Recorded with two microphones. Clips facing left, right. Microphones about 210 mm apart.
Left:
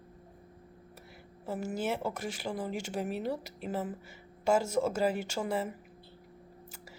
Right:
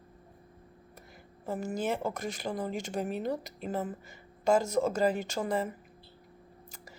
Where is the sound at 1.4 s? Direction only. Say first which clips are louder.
Right 1 dB; 5° left (ahead or behind).